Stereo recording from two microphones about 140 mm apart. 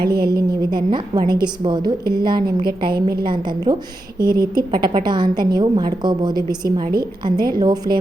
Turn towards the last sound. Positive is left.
turn(degrees=-30)  # may be behind; listen again after turning